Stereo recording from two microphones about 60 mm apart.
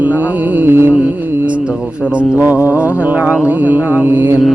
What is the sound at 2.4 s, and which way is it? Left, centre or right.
Mantra, right.